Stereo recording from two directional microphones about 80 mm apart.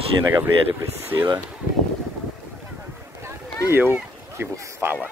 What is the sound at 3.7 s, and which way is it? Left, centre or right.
Speech, right.